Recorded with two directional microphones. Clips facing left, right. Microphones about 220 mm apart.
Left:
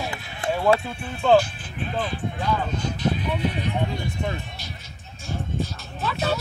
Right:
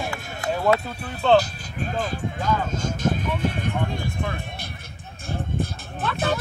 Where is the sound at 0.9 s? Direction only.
40° right (ahead or behind).